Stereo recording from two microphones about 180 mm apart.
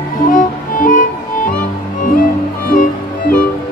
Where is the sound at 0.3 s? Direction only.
50° left (ahead or behind).